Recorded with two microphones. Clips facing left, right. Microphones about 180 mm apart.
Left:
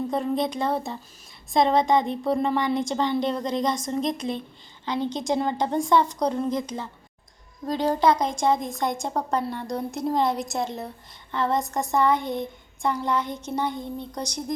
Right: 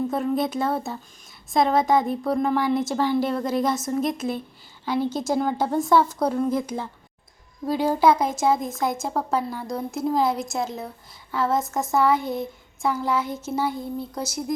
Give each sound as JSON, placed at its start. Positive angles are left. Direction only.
{"t": 0.1, "sound": "speech", "side_deg": -5}